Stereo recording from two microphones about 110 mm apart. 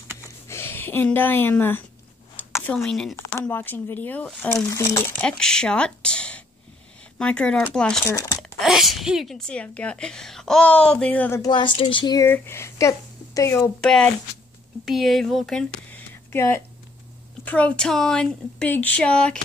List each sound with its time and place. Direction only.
0.5 s speech: 20° left (ahead or behind)
2.3 s a sound: 15° left (ahead or behind)
2.9 s speech: 5° left (ahead or behind)
3.3 s speech: 20° left (ahead or behind)
4.7 s speech: 30° left (ahead or behind)
5.2 s a woman's voice: 5° left (ahead or behind)
9.5 s speech: 10° left (ahead or behind)
11.5 s speech: 45° left (ahead or behind)
12.2 s speech: 20° left (ahead or behind)
13.7 s speech: 5° left (ahead or behind)
15.9 s a sound: 20° left (ahead or behind)
17.5 s speech: 10° left (ahead or behind)